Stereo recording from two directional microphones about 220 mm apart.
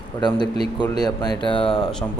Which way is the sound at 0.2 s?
20° left (ahead or behind).